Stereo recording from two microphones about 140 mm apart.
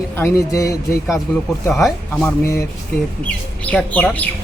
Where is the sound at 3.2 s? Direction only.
10° left (ahead or behind).